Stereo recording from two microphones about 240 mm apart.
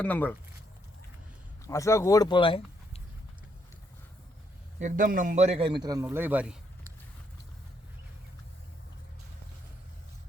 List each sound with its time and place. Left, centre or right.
0.0 s speech: centre
1.6 s speech: centre
4.8 s a man's voice: right; by 6.6 s centre